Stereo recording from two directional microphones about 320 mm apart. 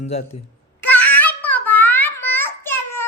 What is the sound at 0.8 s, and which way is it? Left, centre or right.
Babbling, centre.